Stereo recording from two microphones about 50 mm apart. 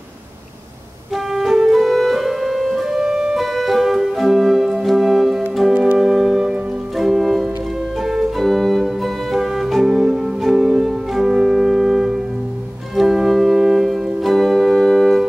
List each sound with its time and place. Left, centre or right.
1.1 s music: centre
3.0 s keyboard: centre
3.3 s organ: centre
5.7 s organ: right
5.9 s music: centre
12.9 s organ: centre